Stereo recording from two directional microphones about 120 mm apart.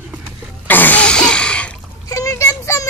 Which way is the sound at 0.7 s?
15° left (ahead or behind).